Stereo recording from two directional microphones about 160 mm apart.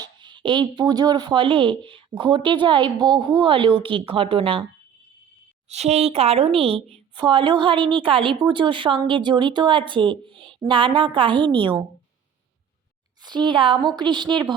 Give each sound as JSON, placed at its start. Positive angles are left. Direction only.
{"t": 0.0, "sound": "a sound", "side_deg": -30}
{"t": 0.8, "sound": "a woman's voice", "side_deg": -25}
{"t": 5.6, "sound": "a woman's voice", "side_deg": -45}
{"t": 13.2, "sound": "a woman's voice", "side_deg": -30}